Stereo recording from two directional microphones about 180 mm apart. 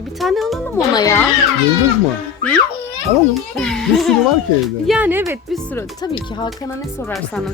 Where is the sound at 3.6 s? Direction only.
5° left (ahead or behind).